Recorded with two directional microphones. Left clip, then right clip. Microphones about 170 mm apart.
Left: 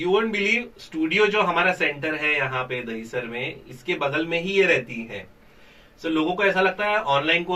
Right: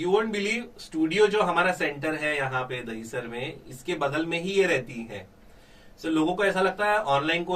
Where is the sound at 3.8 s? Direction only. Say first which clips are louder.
Left 3 dB; 30° right (ahead or behind).